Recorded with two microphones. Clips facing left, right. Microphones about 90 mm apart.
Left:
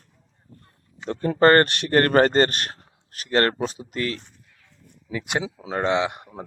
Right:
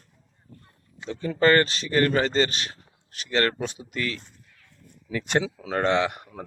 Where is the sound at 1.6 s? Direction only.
60° left (ahead or behind); by 4.2 s 35° left (ahead or behind).